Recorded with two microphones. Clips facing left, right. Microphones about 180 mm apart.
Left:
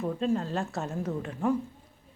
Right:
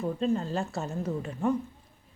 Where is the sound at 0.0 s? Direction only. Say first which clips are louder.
Even; centre (ahead or behind).